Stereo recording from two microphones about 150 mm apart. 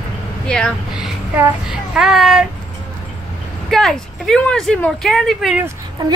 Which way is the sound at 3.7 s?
Centre (ahead or behind).